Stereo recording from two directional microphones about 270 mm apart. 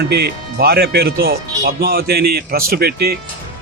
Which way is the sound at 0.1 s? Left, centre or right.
Right.